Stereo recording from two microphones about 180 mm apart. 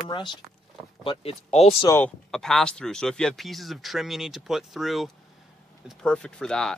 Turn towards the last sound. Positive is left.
turn(degrees=5)  # may be behind; listen again after turning